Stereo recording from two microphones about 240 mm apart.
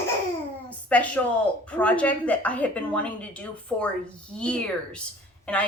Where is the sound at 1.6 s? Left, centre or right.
Centre.